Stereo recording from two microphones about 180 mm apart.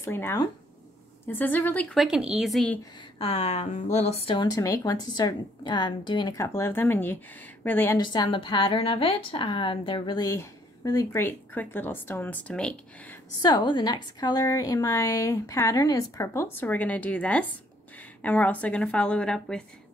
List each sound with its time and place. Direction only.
0.0 s a woman's voice: 10° left (ahead or behind)
3.2 s a woman's voice: 35° left (ahead or behind); by 8.0 s 10° left (ahead or behind)
8.0 s a woman's voice: 25° left (ahead or behind); by 13.2 s 5° left (ahead or behind)
13.4 s a woman's voice: 25° left (ahead or behind); by 19.6 s 5° left (ahead or behind)